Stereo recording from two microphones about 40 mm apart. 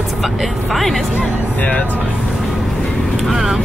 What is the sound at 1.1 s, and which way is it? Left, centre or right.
Speech, left.